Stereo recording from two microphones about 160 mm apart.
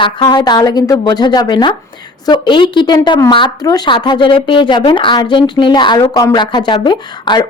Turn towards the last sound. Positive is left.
turn(degrees=30)  # may be behind; listen again after turning